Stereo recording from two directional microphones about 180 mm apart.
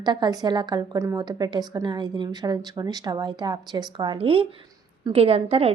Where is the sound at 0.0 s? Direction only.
25° right (ahead or behind).